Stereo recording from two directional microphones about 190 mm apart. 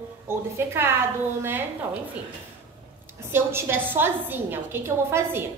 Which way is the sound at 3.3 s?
10° right (ahead or behind).